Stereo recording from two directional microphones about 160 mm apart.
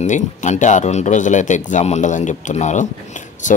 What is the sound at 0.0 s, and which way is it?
Speech, 50° left (ahead or behind).